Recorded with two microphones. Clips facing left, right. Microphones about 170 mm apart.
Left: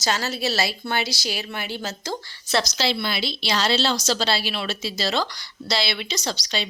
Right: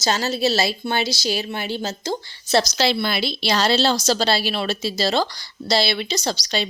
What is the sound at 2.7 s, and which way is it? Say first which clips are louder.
Speech: right 4 dB; 55° right (ahead or behind).